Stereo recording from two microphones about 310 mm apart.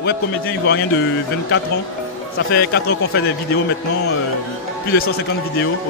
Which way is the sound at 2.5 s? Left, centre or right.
Left.